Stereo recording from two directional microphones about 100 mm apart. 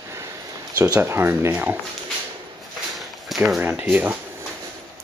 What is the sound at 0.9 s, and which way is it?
Speech, 25° right (ahead or behind).